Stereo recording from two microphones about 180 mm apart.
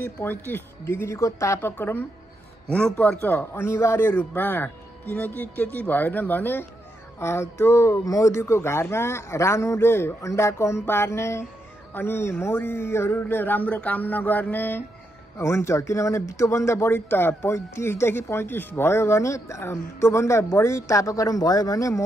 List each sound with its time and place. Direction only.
0.0 s speech: 10° left (ahead or behind)